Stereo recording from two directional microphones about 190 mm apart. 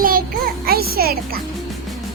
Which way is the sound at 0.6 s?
55° right (ahead or behind).